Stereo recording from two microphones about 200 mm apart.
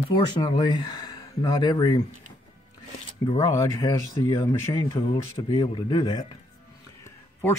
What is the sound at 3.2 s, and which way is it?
A man's voice, 15° left (ahead or behind).